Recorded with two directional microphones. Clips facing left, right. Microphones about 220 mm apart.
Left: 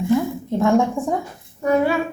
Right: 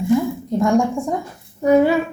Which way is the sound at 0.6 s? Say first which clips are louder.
Even; centre (ahead or behind).